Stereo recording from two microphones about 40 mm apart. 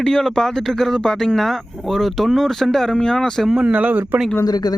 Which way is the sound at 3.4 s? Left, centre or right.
Centre.